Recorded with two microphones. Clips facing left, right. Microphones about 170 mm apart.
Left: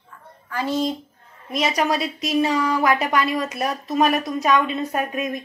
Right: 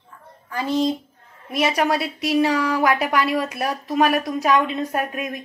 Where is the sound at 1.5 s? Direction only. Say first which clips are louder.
Right 1 dB; 5° right (ahead or behind).